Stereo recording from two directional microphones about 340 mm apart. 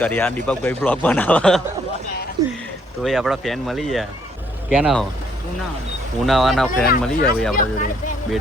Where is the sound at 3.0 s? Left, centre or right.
Centre.